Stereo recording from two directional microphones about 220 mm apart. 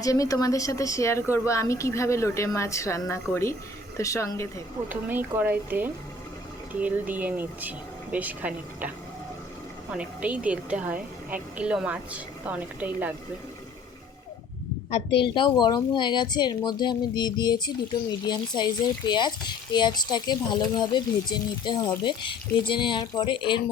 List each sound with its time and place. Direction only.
0.0 s speech: 15° left (ahead or behind)
4.9 s a woman's voice: 10° right (ahead or behind)
9.9 s a woman's voice: 5° right (ahead or behind)
14.8 s speech: 25° left (ahead or behind)